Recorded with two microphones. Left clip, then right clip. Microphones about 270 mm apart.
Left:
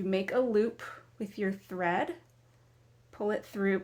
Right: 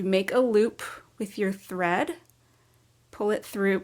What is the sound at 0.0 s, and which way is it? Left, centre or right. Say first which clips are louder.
Speech: right 6 dB; right.